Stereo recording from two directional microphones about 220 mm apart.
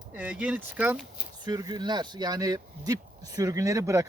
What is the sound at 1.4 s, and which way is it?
Speech, 20° right (ahead or behind).